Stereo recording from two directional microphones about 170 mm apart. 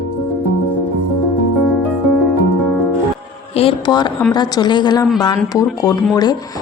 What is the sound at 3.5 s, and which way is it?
A woman's voice, 30° left (ahead or behind).